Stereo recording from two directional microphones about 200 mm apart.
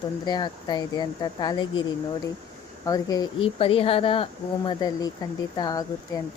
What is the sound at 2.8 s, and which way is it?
Speech, 20° left (ahead or behind).